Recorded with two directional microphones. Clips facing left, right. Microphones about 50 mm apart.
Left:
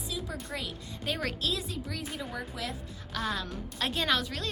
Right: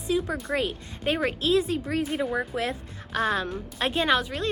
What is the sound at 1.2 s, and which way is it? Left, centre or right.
A woman's voice, right.